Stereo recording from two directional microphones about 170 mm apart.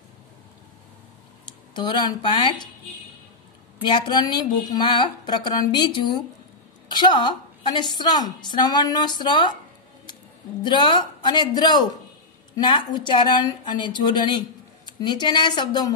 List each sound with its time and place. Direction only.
1.8 s a woman's voice: 25° left (ahead or behind)
3.8 s a woman's voice: 25° left (ahead or behind)
10.6 s a woman's voice: 25° left (ahead or behind)